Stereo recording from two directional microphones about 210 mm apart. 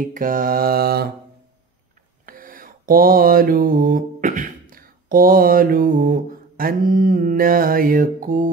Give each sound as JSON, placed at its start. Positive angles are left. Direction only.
{"t": 0.0, "sound": "mantra", "side_deg": -40}
{"t": 2.2, "sound": "mantra", "side_deg": -40}